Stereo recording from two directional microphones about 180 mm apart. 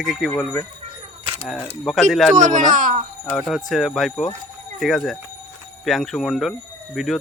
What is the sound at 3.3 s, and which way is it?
Speech, 5° left (ahead or behind).